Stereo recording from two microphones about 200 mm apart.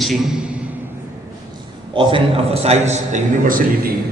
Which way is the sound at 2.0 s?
25° right (ahead or behind).